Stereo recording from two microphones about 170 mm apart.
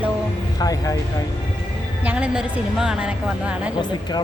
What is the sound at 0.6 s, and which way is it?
Speech, 20° left (ahead or behind).